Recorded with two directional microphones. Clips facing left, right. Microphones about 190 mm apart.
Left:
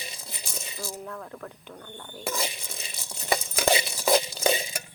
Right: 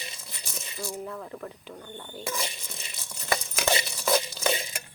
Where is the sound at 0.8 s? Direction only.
Centre (ahead or behind).